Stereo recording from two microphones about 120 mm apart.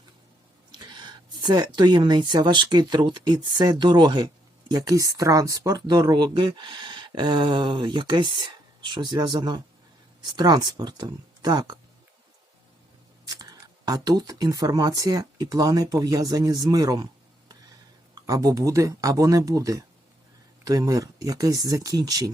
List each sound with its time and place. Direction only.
0.7 s speech: 40° right (ahead or behind)
13.2 s speech: 35° right (ahead or behind)
18.1 s speech: 30° right (ahead or behind)